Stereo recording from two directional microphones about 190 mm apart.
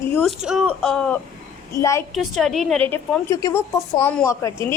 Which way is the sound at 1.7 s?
15° left (ahead or behind).